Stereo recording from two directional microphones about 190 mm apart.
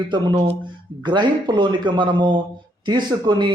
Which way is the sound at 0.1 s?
25° right (ahead or behind).